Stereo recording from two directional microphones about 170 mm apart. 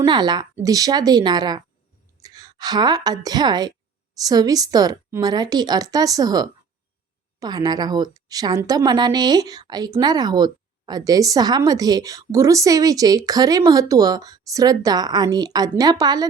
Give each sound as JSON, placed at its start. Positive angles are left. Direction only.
{"t": 0.0, "sound": "a woman's voice", "side_deg": -25}